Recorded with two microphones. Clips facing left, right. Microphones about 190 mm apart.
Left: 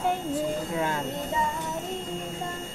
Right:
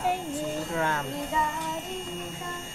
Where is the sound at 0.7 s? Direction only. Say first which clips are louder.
Right 2 dB; 20° left (ahead or behind).